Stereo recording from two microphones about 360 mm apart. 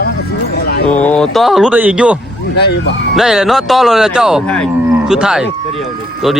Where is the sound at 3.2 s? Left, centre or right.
Centre.